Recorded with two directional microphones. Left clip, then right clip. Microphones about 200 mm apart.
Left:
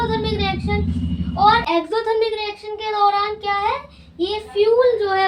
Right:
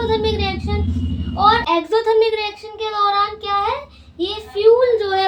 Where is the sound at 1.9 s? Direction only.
25° right (ahead or behind).